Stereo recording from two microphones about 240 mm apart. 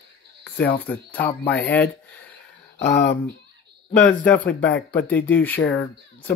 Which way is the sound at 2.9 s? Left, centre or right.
Left.